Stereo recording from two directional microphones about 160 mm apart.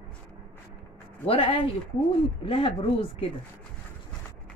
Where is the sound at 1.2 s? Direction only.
35° left (ahead or behind).